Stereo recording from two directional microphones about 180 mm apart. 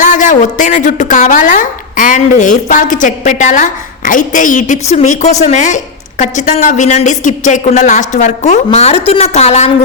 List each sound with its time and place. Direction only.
0.0 s speech: 45° left (ahead or behind)